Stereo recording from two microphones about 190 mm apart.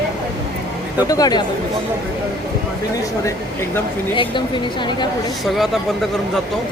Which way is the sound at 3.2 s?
15° left (ahead or behind).